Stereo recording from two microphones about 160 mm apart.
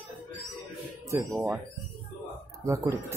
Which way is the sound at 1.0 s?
20° right (ahead or behind).